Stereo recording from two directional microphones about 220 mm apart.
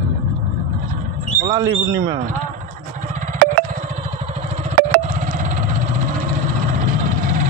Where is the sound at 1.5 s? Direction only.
15° right (ahead or behind).